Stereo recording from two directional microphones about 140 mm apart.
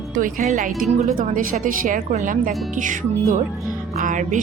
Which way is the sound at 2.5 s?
Centre (ahead or behind).